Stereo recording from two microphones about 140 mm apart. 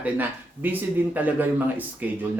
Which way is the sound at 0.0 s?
15° right (ahead or behind).